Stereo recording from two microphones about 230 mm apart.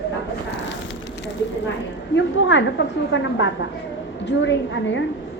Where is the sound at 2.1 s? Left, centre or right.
Left.